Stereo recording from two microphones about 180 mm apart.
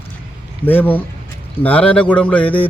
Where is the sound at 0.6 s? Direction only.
10° left (ahead or behind).